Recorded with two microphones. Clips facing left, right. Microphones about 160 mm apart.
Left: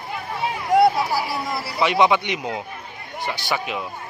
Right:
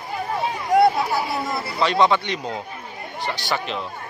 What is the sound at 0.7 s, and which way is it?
Speech, centre (ahead or behind).